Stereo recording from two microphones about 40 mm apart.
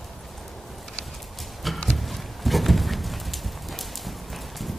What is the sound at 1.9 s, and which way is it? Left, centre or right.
Horse, centre.